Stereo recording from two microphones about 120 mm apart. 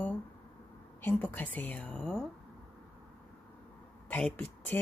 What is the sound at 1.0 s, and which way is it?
A woman's voice, 15° left (ahead or behind).